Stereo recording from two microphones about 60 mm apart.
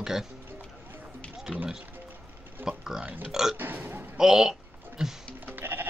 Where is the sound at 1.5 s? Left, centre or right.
Centre.